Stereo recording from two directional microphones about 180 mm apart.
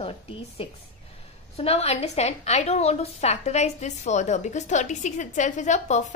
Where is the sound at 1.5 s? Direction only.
35° left (ahead or behind).